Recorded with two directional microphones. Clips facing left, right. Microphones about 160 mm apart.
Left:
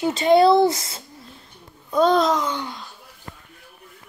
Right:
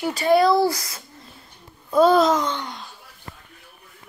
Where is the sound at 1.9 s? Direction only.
5° right (ahead or behind).